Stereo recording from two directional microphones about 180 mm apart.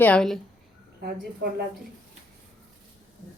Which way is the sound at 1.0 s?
60° right (ahead or behind).